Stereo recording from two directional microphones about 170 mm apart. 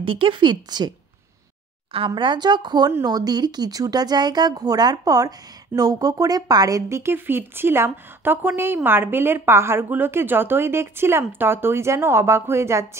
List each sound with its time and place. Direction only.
0.0 s speech: 30° right (ahead or behind); by 12.8 s 15° right (ahead or behind)